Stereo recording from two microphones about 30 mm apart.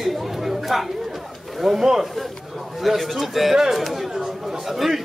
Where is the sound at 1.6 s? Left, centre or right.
Centre.